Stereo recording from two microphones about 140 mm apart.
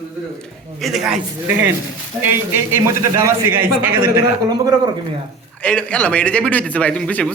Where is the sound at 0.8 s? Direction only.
Centre (ahead or behind).